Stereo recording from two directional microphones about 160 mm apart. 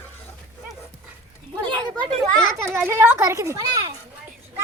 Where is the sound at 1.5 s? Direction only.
25° right (ahead or behind).